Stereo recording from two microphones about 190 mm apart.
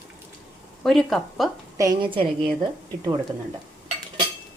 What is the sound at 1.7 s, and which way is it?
Speech, 20° right (ahead or behind).